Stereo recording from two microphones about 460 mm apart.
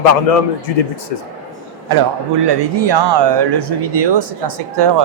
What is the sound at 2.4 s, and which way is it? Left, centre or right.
Speech, right.